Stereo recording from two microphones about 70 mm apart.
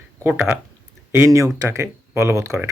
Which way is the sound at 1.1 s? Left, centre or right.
Right.